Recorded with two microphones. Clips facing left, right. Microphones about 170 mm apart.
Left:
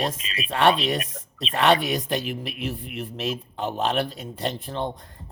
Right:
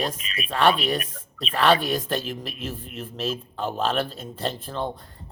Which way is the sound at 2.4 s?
65° left (ahead or behind).